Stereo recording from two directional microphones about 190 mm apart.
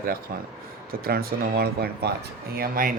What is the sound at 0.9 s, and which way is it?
Speech, 50° right (ahead or behind).